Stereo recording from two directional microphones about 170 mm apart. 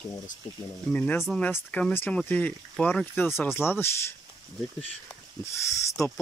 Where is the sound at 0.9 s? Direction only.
10° left (ahead or behind).